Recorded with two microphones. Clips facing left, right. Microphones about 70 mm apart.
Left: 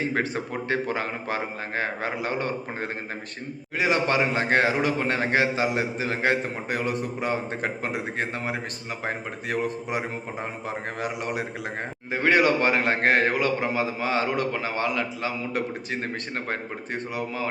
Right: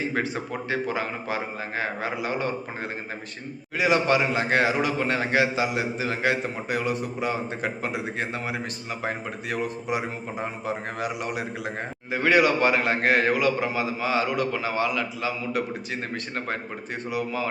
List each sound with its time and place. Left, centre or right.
0.1 s a man's voice: left
3.8 s a man's voice: left
12.1 s a man's voice: left